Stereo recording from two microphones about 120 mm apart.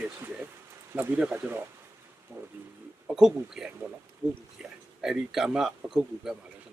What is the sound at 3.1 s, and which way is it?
Speech, 5° right (ahead or behind).